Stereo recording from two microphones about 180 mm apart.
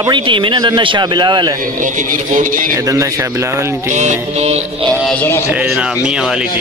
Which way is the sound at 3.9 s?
40° right (ahead or behind).